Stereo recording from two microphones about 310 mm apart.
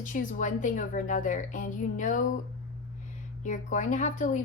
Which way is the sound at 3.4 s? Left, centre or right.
Left.